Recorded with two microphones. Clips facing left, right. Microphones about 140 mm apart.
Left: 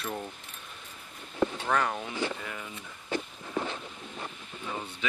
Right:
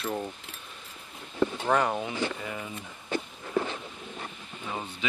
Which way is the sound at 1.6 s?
15° right (ahead or behind).